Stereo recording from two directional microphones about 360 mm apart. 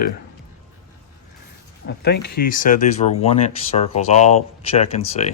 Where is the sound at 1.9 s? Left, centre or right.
Left.